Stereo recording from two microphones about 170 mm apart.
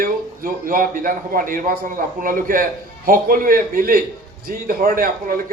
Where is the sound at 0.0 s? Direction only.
55° right (ahead or behind).